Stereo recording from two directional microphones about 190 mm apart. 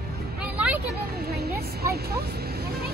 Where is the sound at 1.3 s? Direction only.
55° right (ahead or behind).